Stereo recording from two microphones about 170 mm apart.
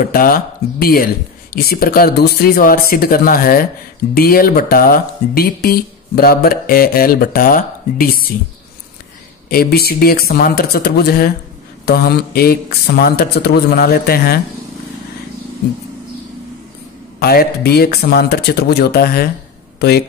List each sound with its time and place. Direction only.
0.0 s speech: 60° left (ahead or behind)
9.5 s speech: 65° left (ahead or behind)
17.2 s speech: 65° left (ahead or behind)